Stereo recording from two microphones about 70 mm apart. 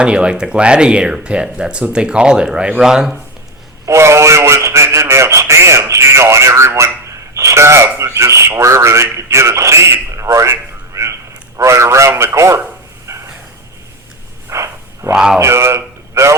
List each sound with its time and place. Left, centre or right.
0.0 s speech: centre
3.8 s speech: right
13.1 s a sound: right
14.5 s a sound: right
15.1 s speech: centre
15.4 s a man's voice: right